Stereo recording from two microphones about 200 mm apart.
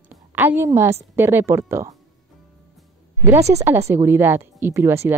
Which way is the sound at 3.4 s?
35° right (ahead or behind).